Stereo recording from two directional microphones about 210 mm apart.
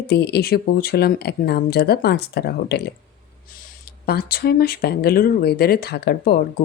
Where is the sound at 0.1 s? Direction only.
50° left (ahead or behind).